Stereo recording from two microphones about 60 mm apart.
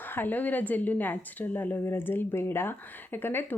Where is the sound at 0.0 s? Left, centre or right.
Left.